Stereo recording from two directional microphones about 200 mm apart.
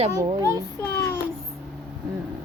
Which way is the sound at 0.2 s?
15° right (ahead or behind).